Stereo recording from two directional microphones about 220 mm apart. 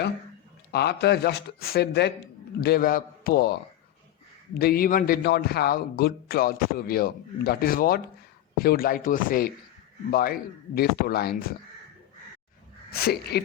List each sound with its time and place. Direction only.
0.7 s a man's voice: 45° left (ahead or behind)
4.5 s a man's voice: 45° left (ahead or behind)
12.9 s a man's voice: 45° left (ahead or behind)